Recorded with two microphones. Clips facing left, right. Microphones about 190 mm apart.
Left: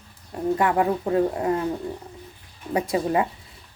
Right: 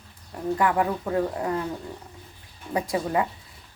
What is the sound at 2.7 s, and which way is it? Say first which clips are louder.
Speech: left 3 dB; 20° left (ahead or behind).